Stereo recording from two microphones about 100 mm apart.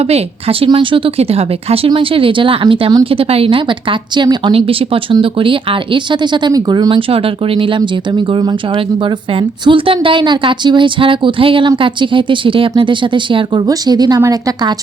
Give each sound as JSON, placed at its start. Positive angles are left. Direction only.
{"t": 0.1, "sound": "speech", "side_deg": -70}
{"t": 1.9, "sound": "a woman's voice", "side_deg": -65}
{"t": 7.1, "sound": "a woman's voice", "side_deg": -65}
{"t": 13.7, "sound": "speech", "side_deg": -40}